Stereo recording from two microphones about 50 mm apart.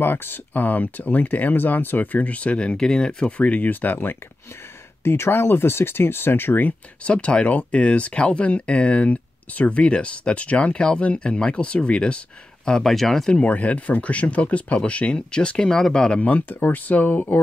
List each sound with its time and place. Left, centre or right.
0.0 s speech: left; by 3.3 s centre
3.3 s speech: left
3.8 s speech: left
5.0 s speech: left
7.1 s speech: left; by 13.3 s centre
13.3 s speech: left
16.2 s speech: left